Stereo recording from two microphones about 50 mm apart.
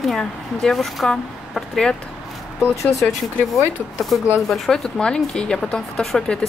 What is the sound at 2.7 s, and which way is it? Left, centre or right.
Speech, left.